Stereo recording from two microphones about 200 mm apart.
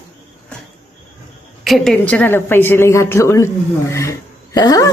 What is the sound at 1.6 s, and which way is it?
A woman's voice, centre (ahead or behind).